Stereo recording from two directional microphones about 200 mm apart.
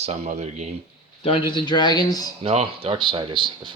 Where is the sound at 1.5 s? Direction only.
20° left (ahead or behind).